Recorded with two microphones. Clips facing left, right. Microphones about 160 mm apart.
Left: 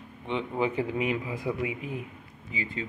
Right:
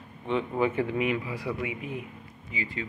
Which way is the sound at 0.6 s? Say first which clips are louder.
Even; 20° left (ahead or behind).